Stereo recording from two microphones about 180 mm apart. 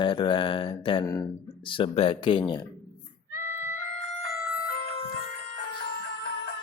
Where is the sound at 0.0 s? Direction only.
25° left (ahead or behind).